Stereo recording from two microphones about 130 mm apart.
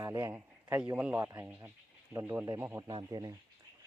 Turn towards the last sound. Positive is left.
turn(degrees=-30)  # may be behind; listen again after turning